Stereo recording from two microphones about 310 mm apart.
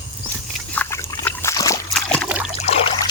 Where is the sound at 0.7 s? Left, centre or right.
Centre.